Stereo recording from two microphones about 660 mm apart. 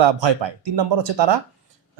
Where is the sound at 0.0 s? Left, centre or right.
Right.